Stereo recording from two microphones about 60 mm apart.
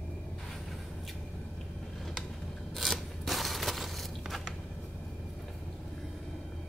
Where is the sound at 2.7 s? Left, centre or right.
Centre.